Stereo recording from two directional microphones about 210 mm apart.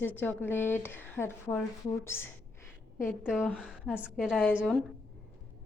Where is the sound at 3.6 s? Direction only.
5° right (ahead or behind).